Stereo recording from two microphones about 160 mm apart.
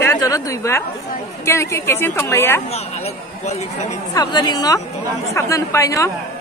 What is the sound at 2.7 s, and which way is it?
Speech, 40° left (ahead or behind).